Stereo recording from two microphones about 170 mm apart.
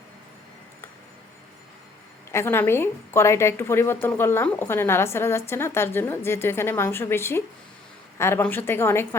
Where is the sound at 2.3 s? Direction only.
15° left (ahead or behind).